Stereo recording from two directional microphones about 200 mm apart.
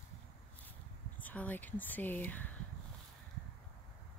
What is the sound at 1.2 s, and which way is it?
Speech, 10° left (ahead or behind).